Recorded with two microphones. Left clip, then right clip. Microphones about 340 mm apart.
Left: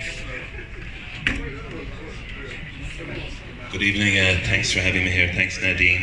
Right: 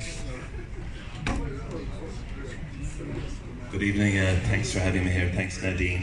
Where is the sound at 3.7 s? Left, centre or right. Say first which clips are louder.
Left 7 dB; right.